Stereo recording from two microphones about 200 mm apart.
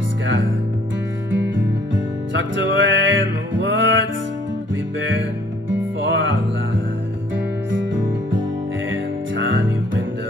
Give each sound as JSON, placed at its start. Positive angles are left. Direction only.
{"t": 1.3, "sound": "music", "side_deg": -70}
{"t": 5.7, "sound": "music", "side_deg": -70}